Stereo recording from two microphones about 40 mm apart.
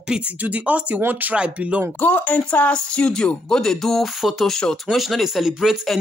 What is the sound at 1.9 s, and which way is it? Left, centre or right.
Speech, left.